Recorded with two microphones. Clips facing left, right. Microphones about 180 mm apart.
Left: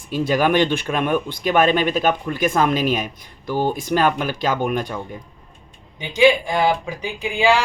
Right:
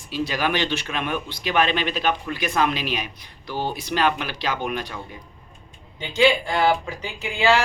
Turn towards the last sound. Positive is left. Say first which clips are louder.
# left 2 dB
turn(degrees=15)  # may be behind; listen again after turning